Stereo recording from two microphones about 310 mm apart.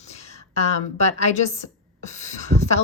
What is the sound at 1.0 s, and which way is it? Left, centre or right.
A woman's voice, left.